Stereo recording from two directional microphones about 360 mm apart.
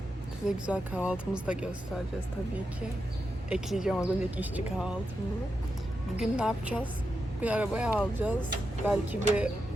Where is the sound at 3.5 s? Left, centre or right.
Centre.